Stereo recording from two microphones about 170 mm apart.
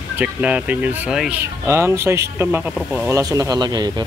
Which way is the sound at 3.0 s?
20° right (ahead or behind).